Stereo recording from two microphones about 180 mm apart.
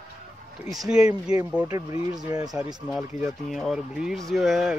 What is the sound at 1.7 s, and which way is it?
Speech, 20° right (ahead or behind).